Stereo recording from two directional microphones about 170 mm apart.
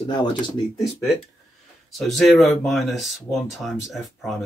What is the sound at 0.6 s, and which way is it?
Speech, 25° left (ahead or behind).